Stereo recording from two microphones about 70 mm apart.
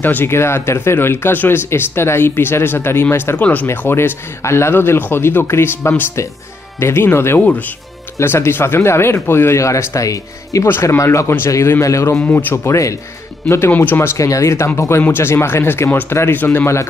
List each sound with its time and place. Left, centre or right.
0.0 s speech: left
3.3 s speech: centre
3.6 s speech: left
7.3 s speech: left
8.2 s speech: left
10.7 s speech: left
12.3 s speech: left
12.6 s speech: left
13.7 s speech: left
14.1 s speech: left